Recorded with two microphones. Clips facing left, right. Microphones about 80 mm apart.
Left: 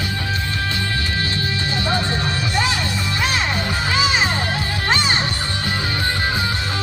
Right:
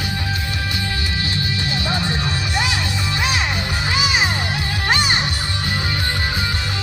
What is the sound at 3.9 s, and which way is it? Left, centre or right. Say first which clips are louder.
Music: left 2 dB; left.